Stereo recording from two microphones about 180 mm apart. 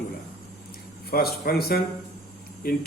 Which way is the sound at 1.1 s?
55° left (ahead or behind).